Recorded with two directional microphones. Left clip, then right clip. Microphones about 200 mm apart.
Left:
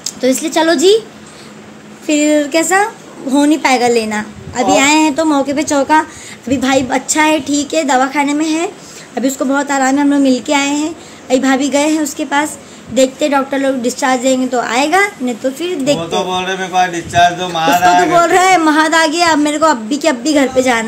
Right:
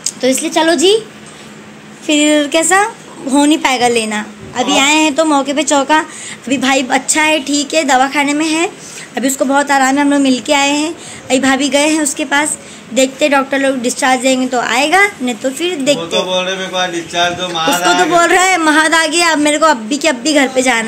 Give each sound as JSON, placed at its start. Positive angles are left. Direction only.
{"t": 0.0, "sound": "a woman's voice", "side_deg": 10}
{"t": 2.0, "sound": "a woman's voice", "side_deg": 0}
{"t": 16.3, "sound": "speech", "side_deg": 60}
{"t": 18.1, "sound": "a woman's voice", "side_deg": 0}